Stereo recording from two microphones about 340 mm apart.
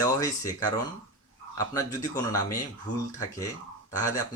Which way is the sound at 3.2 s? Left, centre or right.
Centre.